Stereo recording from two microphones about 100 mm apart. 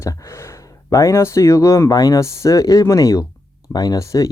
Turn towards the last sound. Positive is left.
turn(degrees=35)  # may be behind; listen again after turning